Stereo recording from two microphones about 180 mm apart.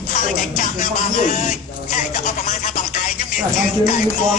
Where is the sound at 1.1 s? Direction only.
40° left (ahead or behind).